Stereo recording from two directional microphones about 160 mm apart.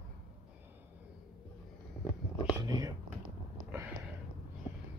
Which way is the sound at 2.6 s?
25° right (ahead or behind).